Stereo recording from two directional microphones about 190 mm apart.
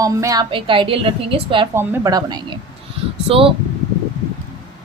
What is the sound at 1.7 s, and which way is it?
A woman's voice, 15° right (ahead or behind).